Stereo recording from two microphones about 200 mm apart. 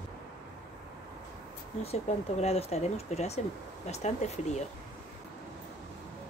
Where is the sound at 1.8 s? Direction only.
30° left (ahead or behind).